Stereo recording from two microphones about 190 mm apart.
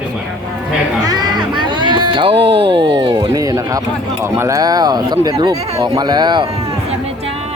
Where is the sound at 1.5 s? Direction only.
25° right (ahead or behind).